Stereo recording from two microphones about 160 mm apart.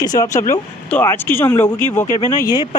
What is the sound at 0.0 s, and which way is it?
Speech, 20° left (ahead or behind).